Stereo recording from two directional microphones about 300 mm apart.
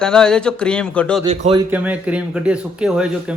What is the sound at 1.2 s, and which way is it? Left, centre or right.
Speech, centre.